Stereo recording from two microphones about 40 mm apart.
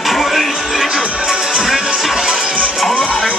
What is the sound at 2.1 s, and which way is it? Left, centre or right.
Music, centre.